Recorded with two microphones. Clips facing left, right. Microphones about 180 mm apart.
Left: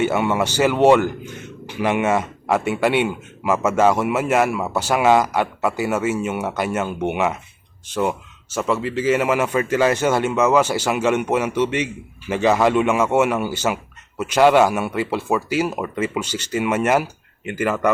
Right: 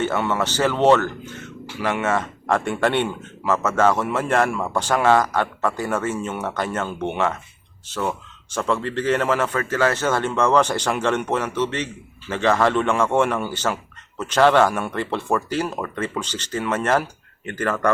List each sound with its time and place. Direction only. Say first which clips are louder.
0.0 s speech: left 3 dB; 10° left (ahead or behind)